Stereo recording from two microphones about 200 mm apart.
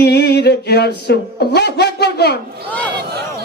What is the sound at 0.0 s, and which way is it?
Music, 55° left (ahead or behind).